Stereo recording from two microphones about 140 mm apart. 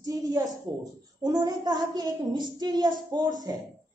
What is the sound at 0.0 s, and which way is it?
A woman's voice, 25° right (ahead or behind).